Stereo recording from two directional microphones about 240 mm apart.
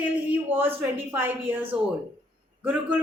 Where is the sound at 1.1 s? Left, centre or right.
Centre.